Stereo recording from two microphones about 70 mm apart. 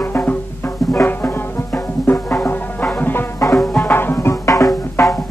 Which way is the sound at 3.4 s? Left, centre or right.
Left.